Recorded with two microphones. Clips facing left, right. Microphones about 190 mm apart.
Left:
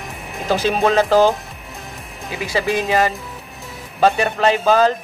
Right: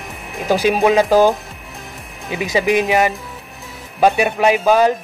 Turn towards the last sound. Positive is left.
turn(degrees=-15)  # may be behind; listen again after turning